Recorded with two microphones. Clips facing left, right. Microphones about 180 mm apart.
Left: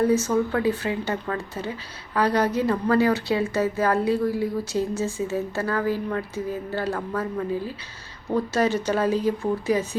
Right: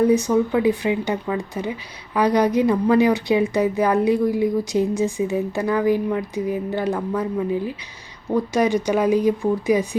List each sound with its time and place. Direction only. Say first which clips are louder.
0.0 s a woman's voice: right 4 dB; 15° right (ahead or behind)